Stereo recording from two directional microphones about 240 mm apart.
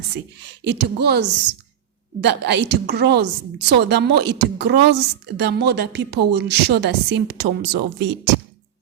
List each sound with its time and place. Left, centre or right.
0.6 s a woman's voice: right